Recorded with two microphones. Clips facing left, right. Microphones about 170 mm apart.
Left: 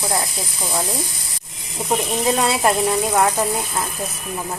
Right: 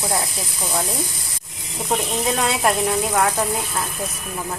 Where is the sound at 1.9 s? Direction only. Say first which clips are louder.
Left 2 dB; 5° left (ahead or behind).